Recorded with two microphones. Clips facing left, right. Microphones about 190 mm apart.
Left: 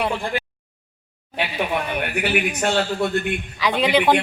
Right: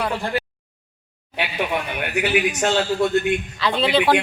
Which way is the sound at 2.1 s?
55° left (ahead or behind).